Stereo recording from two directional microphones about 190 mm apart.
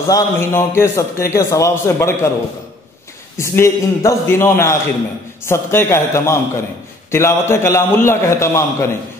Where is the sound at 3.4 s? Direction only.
15° left (ahead or behind).